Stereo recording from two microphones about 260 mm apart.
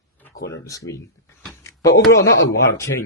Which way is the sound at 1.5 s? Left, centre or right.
Centre.